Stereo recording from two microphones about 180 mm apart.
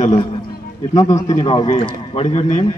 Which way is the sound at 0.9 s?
20° left (ahead or behind).